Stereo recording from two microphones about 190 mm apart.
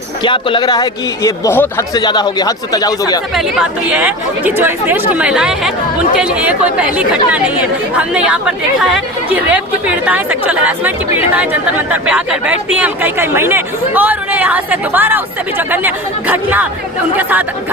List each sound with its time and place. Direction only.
0.2 s a man's voice: 25° left (ahead or behind)
2.0 s a man's voice: 20° left (ahead or behind)
3.8 s speech: 5° right (ahead or behind)